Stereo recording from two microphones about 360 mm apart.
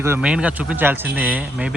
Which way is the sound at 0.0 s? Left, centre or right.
Centre.